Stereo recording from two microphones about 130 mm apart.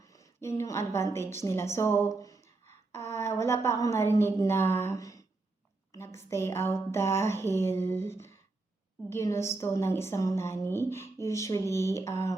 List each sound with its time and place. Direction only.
0.1 s a woman's voice: 25° left (ahead or behind)